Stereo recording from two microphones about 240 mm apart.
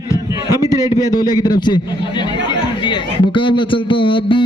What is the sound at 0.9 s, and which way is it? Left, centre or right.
A man's voice, centre.